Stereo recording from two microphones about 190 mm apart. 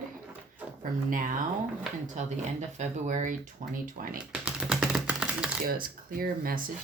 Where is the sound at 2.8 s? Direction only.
40° right (ahead or behind).